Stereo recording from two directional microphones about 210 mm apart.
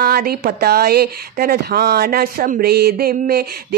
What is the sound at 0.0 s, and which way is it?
Speech, 45° right (ahead or behind).